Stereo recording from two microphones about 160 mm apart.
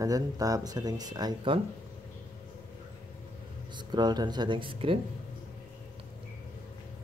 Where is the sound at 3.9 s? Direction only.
25° right (ahead or behind).